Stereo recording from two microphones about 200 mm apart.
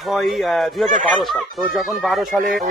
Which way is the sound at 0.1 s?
Centre (ahead or behind).